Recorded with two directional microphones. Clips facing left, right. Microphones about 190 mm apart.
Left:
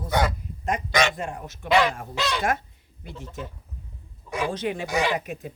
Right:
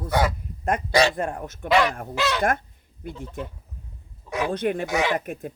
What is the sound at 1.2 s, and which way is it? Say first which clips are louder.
Speech: right 5 dB; 55° right (ahead or behind).